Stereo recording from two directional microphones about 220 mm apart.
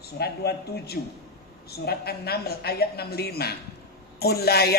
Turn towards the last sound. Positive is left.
turn(degrees=45)  # may be behind; listen again after turning